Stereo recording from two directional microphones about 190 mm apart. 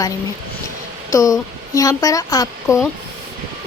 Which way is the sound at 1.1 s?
15° left (ahead or behind).